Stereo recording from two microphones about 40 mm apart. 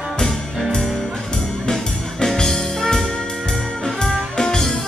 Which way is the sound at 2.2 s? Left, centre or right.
Centre.